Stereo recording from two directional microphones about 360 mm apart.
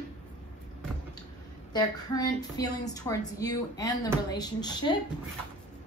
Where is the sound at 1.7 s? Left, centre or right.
Centre.